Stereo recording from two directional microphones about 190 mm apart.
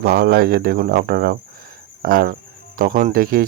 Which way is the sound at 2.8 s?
45° right (ahead or behind).